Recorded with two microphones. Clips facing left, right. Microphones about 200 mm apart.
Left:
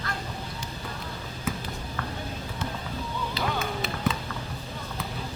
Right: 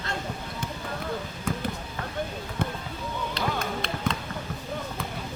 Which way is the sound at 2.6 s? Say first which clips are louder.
Right 5 dB; 55° right (ahead or behind).